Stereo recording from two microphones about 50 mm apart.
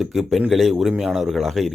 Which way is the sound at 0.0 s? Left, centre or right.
Centre.